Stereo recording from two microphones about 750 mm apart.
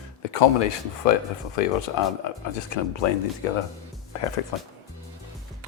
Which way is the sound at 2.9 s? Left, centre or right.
Left.